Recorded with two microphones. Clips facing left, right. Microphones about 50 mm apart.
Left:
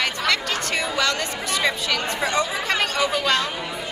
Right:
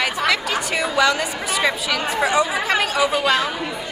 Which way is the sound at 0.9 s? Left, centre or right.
Centre.